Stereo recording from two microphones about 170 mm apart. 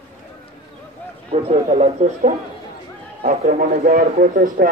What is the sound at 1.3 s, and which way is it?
A man's voice, 35° right (ahead or behind).